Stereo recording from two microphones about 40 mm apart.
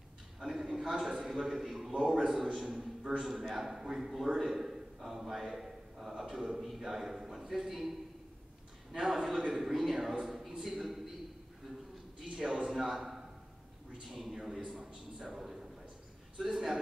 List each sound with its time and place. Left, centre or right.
0.4 s a man's voice: centre
8.9 s a man's voice: centre
12.6 s a man's voice: centre
14.8 s a sound: right
15.2 s a man's voice: centre